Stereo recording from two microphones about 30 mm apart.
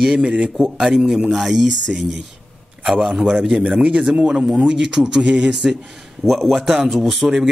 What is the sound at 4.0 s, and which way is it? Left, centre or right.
Speech, right.